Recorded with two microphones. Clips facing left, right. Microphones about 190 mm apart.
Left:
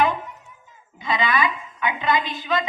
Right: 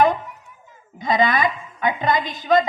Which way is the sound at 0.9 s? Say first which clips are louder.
Right 4 dB; 45° right (ahead or behind).